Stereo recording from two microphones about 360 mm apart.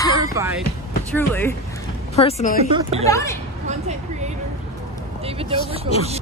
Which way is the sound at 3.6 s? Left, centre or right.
Centre.